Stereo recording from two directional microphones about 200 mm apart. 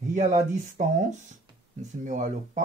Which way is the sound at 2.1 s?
40° right (ahead or behind).